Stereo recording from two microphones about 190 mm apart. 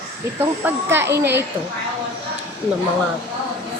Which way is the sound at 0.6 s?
10° right (ahead or behind).